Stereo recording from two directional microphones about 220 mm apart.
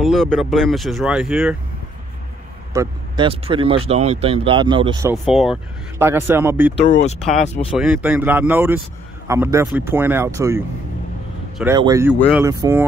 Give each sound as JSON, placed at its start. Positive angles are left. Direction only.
{"t": 0.0, "sound": "speech", "side_deg": 0}
{"t": 2.7, "sound": "speech", "side_deg": -15}
{"t": 3.3, "sound": "speech", "side_deg": -25}
{"t": 5.1, "sound": "speech", "side_deg": 0}
{"t": 7.3, "sound": "speech", "side_deg": 30}
{"t": 7.7, "sound": "speech", "side_deg": -5}